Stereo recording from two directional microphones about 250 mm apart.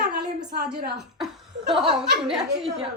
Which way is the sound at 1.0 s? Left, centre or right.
Centre.